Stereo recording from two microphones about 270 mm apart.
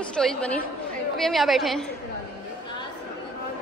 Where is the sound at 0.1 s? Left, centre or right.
Centre.